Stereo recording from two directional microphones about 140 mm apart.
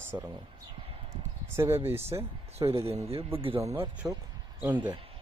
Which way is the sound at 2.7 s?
45° right (ahead or behind).